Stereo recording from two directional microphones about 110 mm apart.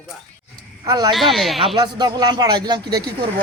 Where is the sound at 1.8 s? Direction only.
40° right (ahead or behind).